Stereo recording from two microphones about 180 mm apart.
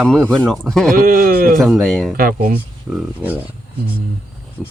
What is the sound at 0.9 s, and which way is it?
Speech, 55° right (ahead or behind).